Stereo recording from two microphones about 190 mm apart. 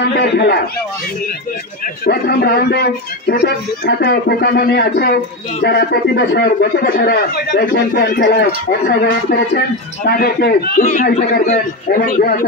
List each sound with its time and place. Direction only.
0.0 s speech: 60° left (ahead or behind)
2.0 s speech: 55° left (ahead or behind)
10.0 s a man's voice: 55° left (ahead or behind)